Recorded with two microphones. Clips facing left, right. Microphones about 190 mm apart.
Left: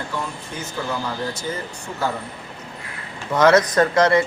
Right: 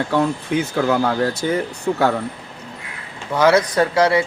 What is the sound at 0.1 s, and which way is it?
Speech, 75° right (ahead or behind).